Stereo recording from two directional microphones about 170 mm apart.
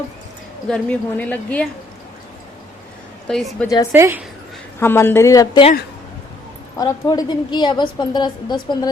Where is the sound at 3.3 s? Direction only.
5° left (ahead or behind).